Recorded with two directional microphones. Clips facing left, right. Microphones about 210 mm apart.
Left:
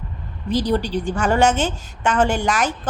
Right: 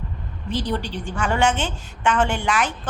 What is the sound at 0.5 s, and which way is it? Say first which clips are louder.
A woman's voice: left 6 dB; 40° left (ahead or behind).